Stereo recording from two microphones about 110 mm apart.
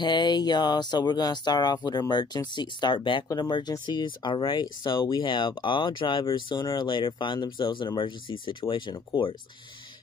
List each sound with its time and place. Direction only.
0.0 s speech: 40° left (ahead or behind)